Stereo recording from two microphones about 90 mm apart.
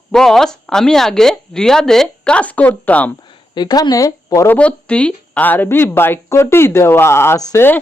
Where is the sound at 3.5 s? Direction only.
50° left (ahead or behind).